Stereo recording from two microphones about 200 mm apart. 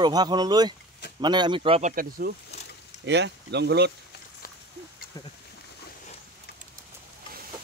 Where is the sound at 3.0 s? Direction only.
60° right (ahead or behind).